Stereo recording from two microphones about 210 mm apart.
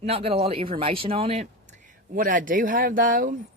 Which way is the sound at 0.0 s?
30° right (ahead or behind).